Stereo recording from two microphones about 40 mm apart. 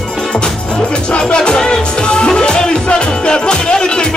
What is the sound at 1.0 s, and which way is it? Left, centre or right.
Music, left.